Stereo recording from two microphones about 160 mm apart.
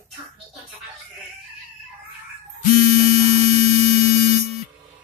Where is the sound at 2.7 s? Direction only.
40° right (ahead or behind).